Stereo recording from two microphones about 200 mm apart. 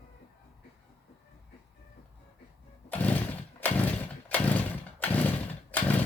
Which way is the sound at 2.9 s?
5° left (ahead or behind).